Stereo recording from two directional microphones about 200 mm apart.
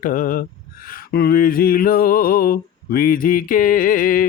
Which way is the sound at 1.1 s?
50° left (ahead or behind).